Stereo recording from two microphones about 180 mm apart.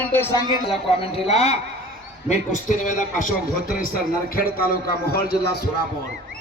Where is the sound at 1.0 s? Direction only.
35° left (ahead or behind); by 5.6 s 60° left (ahead or behind).